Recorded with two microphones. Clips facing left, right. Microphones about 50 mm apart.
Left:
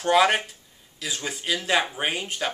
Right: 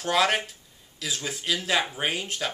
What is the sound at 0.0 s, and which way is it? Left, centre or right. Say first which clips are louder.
Speech: left 4 dB; centre.